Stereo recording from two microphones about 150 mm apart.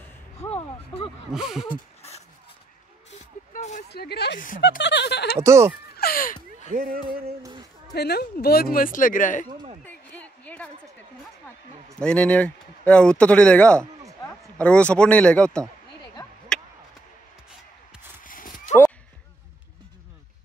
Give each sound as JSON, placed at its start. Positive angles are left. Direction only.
{"t": 0.4, "sound": "a sound", "side_deg": 40}
{"t": 1.3, "sound": "a sound", "side_deg": -5}
{"t": 3.1, "sound": "vehicle", "side_deg": 50}
{"t": 3.9, "sound": "speech", "side_deg": 90}
{"t": 5.3, "sound": "speech", "side_deg": -20}
{"t": 5.9, "sound": "speech", "side_deg": 75}
{"t": 6.7, "sound": "speech", "side_deg": -75}
{"t": 7.9, "sound": "speech", "side_deg": 90}
{"t": 9.8, "sound": "a sound", "side_deg": 10}
{"t": 12.0, "sound": "speech", "side_deg": 10}
{"t": 13.7, "sound": "a sound", "side_deg": -20}
{"t": 14.6, "sound": "speech", "side_deg": 10}
{"t": 18.2, "sound": "horse", "side_deg": 65}